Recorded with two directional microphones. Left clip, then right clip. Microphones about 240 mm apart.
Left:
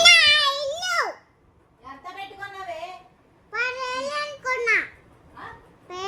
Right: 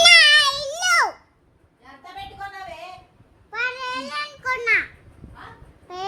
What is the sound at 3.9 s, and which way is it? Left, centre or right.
Child singing, centre.